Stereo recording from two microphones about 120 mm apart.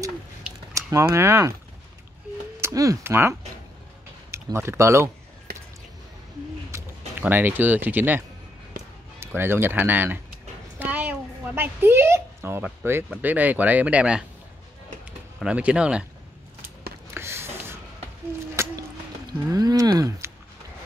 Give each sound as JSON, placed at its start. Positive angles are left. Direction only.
{"t": 0.7, "sound": "speech", "side_deg": -25}
{"t": 2.6, "sound": "speech", "side_deg": -30}
{"t": 6.7, "sound": "a sound", "side_deg": -25}
{"t": 7.2, "sound": "speech", "side_deg": -15}
{"t": 9.2, "sound": "speech", "side_deg": -20}
{"t": 10.8, "sound": "a sound", "side_deg": -15}
{"t": 13.2, "sound": "speech", "side_deg": -15}
{"t": 15.4, "sound": "speech", "side_deg": -10}
{"t": 17.1, "sound": "a sound", "side_deg": -20}